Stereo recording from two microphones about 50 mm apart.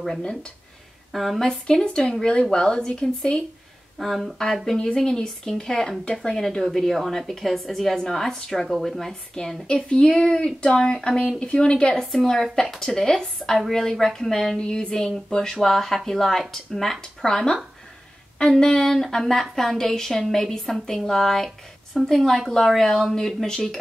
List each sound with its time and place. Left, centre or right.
0.2 s speech: centre
1.1 s a woman's voice: centre
1.4 s a woman's voice: centre
4.0 s a woman's voice: centre
4.7 s a woman's voice: centre
11.9 s a woman's voice: centre
14.6 s a woman's voice: centre